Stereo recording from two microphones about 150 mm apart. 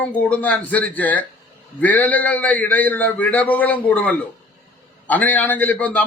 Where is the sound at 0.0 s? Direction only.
10° left (ahead or behind).